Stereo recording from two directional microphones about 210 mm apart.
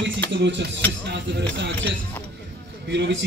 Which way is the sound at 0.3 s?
55° right (ahead or behind).